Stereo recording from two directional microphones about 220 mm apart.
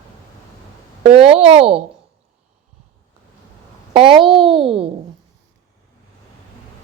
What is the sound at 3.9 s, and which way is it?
Speech, 25° right (ahead or behind).